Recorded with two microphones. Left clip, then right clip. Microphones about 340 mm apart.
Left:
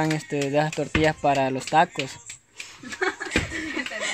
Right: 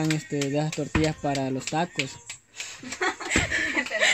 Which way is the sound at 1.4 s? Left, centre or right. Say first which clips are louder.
Left 7 dB; left.